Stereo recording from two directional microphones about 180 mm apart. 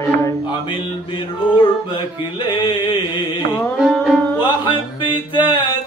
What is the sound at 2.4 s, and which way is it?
Music, 25° left (ahead or behind).